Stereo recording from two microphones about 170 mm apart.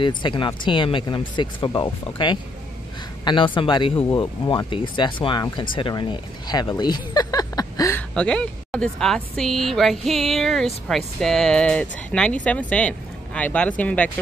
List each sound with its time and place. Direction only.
0.0 s speech: 30° left (ahead or behind)
8.1 s speech: 5° left (ahead or behind)